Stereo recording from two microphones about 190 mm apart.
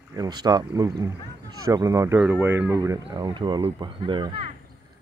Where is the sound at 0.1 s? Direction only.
20° right (ahead or behind).